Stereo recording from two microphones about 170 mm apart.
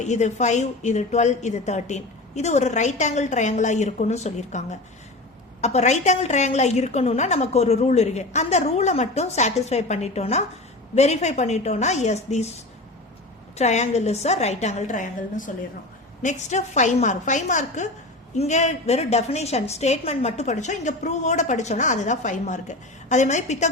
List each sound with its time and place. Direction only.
0.0 s a woman's voice: 45° left (ahead or behind)
13.6 s a woman's voice: 40° left (ahead or behind)